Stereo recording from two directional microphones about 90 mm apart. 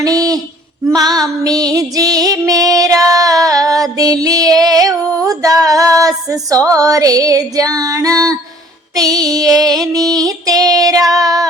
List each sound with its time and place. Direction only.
0.0 s a sound: 40° right (ahead or behind)
0.9 s female singing: 45° right (ahead or behind)
2.5 s music: 40° right (ahead or behind)
9.0 s female singing: 45° right (ahead or behind)
9.9 s child singing: 45° right (ahead or behind)